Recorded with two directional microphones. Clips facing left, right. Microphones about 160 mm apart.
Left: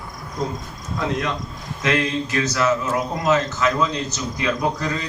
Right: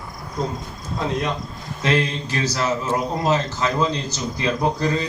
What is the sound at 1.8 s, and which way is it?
A man's voice, 30° right (ahead or behind).